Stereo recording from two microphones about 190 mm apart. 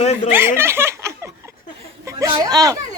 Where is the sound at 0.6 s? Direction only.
10° right (ahead or behind).